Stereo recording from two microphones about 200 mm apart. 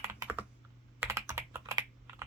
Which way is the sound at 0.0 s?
15° right (ahead or behind).